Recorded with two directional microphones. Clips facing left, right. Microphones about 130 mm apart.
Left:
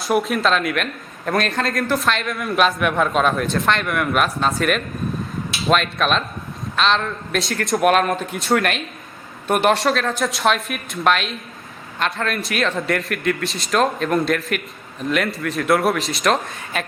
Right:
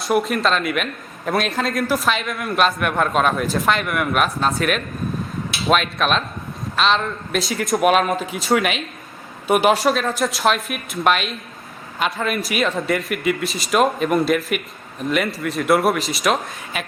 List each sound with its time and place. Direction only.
0.0 s a man's voice: centre (ahead or behind)